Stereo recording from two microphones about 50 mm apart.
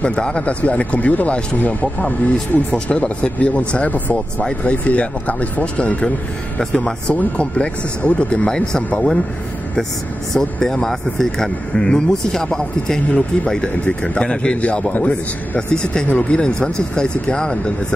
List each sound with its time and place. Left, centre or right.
0.0 s speech: left
8.5 s speech: centre
10.3 s speech: centre